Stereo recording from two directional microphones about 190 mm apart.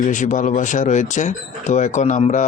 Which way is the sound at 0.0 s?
40° left (ahead or behind).